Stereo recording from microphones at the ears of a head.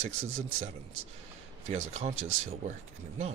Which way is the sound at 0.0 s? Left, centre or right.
Right.